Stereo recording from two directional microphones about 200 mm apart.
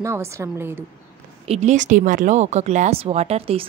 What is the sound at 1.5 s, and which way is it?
A woman's voice, 35° right (ahead or behind).